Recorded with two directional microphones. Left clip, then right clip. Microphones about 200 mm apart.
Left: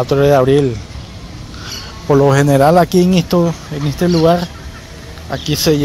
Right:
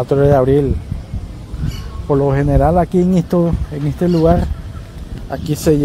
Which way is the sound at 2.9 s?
10° right (ahead or behind).